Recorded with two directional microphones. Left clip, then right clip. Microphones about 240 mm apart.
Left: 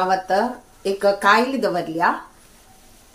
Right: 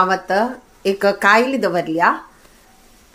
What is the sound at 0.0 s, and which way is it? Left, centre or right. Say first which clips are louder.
A woman's voice: right 3 dB; right.